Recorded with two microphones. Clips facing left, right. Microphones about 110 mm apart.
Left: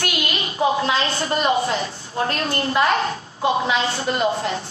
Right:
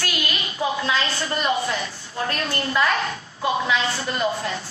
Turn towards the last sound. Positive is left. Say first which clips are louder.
# left 3 dB
turn(degrees=30)  # may be behind; listen again after turning